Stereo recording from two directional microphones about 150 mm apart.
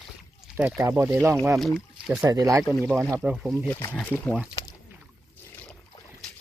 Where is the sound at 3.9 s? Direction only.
10° left (ahead or behind).